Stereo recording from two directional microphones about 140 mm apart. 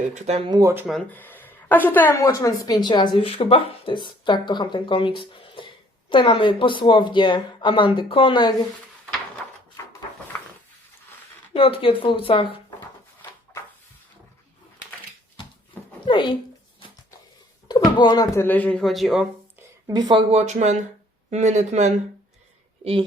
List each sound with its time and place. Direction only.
0.1 s speech: 50° right (ahead or behind)
0.4 s speech: 30° right (ahead or behind)
1.1 s speech: 15° left (ahead or behind)
2.2 s speech: 25° left (ahead or behind)
11.5 s speech: 40° left (ahead or behind)
16.0 s speech: 35° left (ahead or behind)
17.7 s speech: 30° left (ahead or behind)
18.4 s speech: 10° left (ahead or behind)
19.9 s speech: 30° right (ahead or behind)
20.3 s speech: 55° right (ahead or behind)
22.8 s a woman's voice: 40° right (ahead or behind)